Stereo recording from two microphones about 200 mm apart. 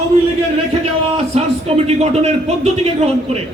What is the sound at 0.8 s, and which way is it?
Speech, 30° right (ahead or behind).